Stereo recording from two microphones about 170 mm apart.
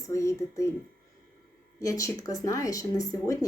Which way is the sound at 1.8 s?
20° left (ahead or behind).